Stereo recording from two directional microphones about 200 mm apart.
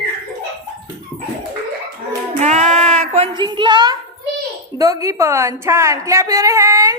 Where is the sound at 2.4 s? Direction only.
35° right (ahead or behind); by 3.9 s 20° right (ahead or behind).